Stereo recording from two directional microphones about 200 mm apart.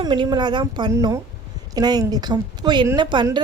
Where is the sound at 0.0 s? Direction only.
20° right (ahead or behind).